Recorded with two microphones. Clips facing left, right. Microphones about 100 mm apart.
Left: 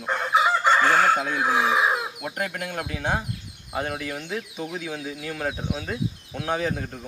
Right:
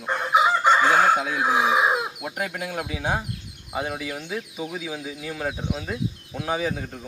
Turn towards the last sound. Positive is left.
turn(degrees=0)  # may be behind; listen again after turning